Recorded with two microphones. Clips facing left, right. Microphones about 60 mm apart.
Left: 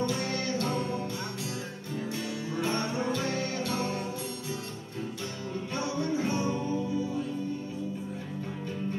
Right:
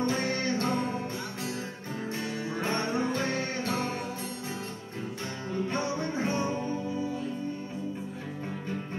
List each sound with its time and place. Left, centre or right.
0.0 s music: right
2.5 s music: right
5.7 s music: right